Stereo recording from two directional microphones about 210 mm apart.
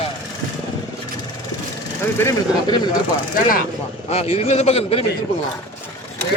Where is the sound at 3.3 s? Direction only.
40° left (ahead or behind).